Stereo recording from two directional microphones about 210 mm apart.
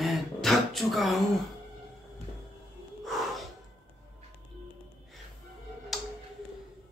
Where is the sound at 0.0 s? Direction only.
Centre (ahead or behind).